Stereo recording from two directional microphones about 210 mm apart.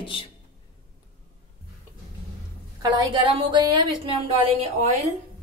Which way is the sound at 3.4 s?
20° right (ahead or behind).